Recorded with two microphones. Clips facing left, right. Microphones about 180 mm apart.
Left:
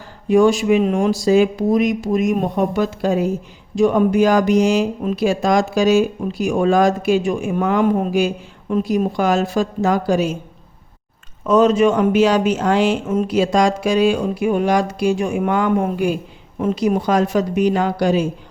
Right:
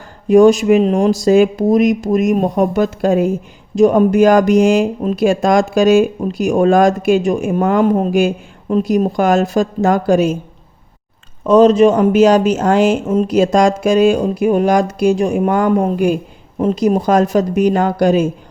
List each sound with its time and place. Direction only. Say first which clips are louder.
0.3 s speech: right 5 dB; 45° right (ahead or behind)
11.4 s speech: right 5 dB; 35° right (ahead or behind); by 18.3 s 50° right (ahead or behind)